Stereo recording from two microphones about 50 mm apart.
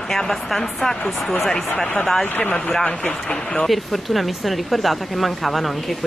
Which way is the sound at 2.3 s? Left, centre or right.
Left.